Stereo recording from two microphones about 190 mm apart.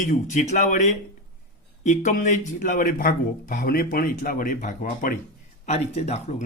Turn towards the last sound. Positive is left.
turn(degrees=35)  # may be behind; listen again after turning